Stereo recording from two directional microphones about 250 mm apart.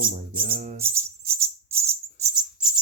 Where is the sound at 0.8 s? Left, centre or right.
Centre.